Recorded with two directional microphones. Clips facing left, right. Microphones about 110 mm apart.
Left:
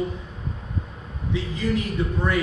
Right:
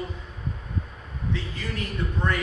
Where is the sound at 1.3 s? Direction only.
15° left (ahead or behind).